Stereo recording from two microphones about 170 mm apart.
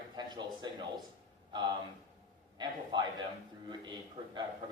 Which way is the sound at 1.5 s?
25° right (ahead or behind).